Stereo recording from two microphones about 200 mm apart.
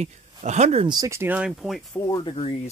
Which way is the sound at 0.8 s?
20° right (ahead or behind).